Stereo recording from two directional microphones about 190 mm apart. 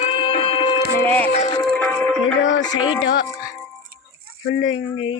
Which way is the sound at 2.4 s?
75° left (ahead or behind).